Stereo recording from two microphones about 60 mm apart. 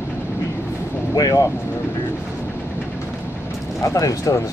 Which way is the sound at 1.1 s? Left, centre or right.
Left.